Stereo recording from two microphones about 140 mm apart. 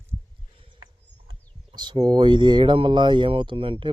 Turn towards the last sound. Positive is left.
turn(degrees=-40)  # may be behind; listen again after turning